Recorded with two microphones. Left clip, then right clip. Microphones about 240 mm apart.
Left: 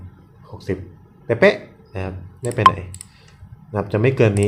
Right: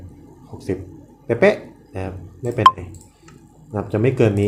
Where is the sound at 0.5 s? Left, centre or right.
Centre.